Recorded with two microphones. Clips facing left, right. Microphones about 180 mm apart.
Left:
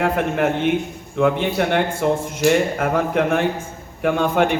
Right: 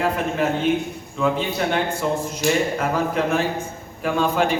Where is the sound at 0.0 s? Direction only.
60° left (ahead or behind).